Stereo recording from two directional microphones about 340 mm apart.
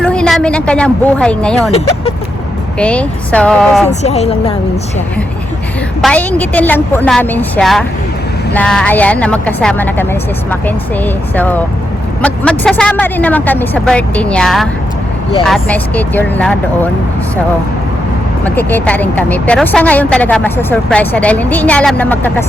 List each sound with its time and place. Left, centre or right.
0.0 s a woman's voice: centre
2.7 s a woman's voice: centre
4.0 s a woman's voice: centre
6.0 s a woman's voice: centre
18.4 s a woman's voice: centre